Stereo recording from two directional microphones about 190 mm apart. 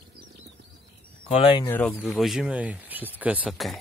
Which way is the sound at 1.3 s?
30° left (ahead or behind).